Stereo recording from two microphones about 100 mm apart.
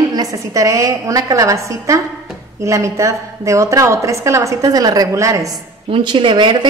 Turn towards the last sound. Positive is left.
turn(degrees=-55)  # may be behind; listen again after turning